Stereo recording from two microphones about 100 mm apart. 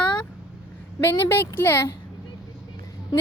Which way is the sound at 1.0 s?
20° left (ahead or behind).